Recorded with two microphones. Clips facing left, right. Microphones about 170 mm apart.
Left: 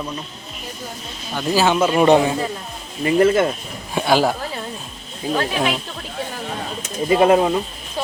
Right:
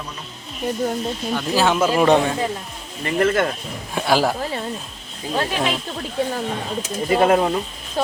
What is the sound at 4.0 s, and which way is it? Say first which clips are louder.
Speech: left 2 dB; centre (ahead or behind).